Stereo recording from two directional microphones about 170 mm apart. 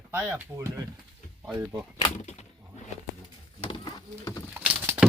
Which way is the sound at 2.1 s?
45° left (ahead or behind).